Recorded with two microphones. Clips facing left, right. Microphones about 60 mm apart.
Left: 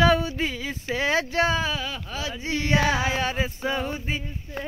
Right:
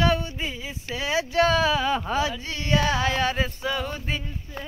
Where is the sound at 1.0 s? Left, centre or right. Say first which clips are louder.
Even; left.